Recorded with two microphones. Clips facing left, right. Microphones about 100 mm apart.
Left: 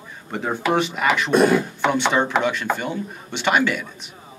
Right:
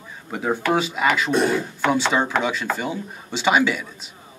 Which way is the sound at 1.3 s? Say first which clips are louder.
Left 8 dB; 55° left (ahead or behind).